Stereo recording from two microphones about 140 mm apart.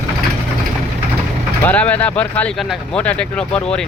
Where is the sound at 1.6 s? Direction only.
10° left (ahead or behind).